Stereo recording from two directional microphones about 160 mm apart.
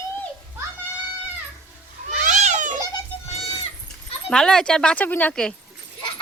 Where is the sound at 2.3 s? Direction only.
45° right (ahead or behind).